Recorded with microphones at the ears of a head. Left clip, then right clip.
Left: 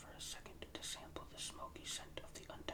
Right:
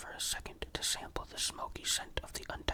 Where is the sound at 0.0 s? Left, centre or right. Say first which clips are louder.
Right 12 dB; right.